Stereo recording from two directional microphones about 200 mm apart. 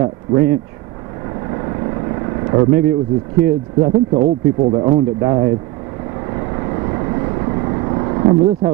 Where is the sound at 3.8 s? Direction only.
25° right (ahead or behind).